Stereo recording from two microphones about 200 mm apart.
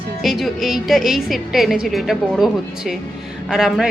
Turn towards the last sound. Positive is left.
turn(degrees=0)  # may be behind; listen again after turning